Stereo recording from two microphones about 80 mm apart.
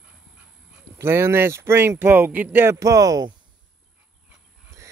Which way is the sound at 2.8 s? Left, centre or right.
Right.